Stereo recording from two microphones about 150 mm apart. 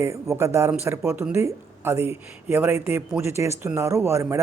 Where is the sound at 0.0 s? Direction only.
20° right (ahead or behind).